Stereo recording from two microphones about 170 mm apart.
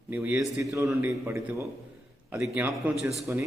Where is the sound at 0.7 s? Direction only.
20° right (ahead or behind).